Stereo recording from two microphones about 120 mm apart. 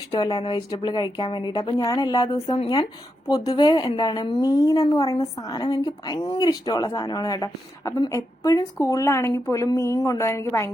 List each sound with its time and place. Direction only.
0.2 s a woman's voice: 35° left (ahead or behind)